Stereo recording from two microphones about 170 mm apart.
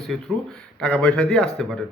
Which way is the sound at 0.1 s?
Centre (ahead or behind).